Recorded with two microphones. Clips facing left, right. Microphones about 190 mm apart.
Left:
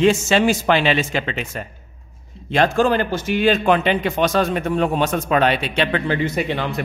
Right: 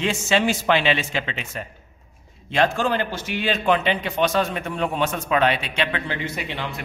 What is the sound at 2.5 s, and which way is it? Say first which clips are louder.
A man's voice: left 4 dB; 40° left (ahead or behind).